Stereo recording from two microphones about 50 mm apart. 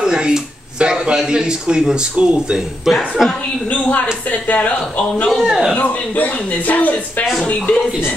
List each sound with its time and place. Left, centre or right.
0.0 s speech: centre
2.9 s speech: centre
3.9 s speech: left
5.4 s speech: centre
5.8 s speech: left
7.5 s speech: centre